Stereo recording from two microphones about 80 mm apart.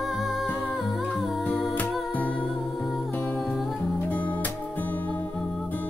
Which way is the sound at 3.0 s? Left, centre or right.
Left.